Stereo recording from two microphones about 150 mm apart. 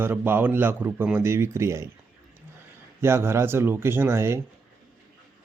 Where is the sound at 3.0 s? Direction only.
15° right (ahead or behind).